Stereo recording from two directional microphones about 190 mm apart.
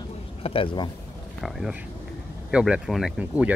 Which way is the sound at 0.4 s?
30° left (ahead or behind).